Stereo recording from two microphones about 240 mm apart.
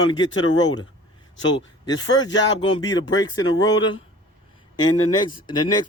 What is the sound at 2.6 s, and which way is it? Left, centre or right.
Speech, centre.